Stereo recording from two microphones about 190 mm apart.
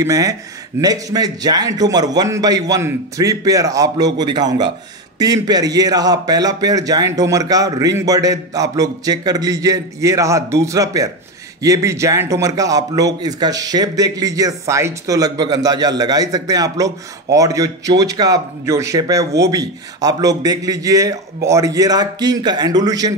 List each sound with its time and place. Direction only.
0.0 s a man's voice: 20° right (ahead or behind)